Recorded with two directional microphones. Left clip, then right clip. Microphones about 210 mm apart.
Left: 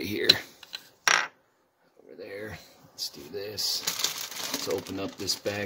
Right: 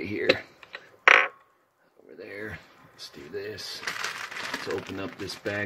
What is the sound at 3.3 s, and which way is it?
Speech, centre (ahead or behind).